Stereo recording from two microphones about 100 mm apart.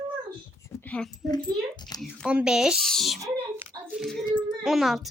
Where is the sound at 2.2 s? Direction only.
10° right (ahead or behind).